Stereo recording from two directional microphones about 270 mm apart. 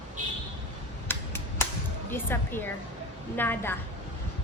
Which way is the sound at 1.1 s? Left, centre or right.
Centre.